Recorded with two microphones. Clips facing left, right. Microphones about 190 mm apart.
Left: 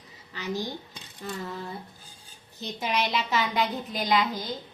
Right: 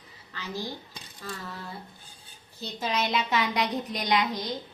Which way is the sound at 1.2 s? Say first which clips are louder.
Left 3 dB; 20° left (ahead or behind).